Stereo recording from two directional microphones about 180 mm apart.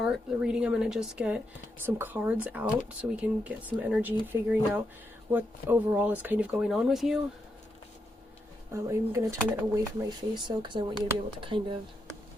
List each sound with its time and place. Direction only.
0.0 s speech: centre (ahead or behind)
8.7 s speech: 15° right (ahead or behind)